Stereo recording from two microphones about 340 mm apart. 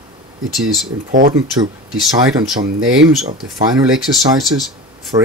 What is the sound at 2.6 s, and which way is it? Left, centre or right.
Speech, right.